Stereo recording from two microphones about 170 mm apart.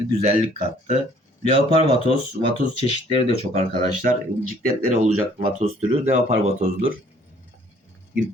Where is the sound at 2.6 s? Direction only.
30° left (ahead or behind).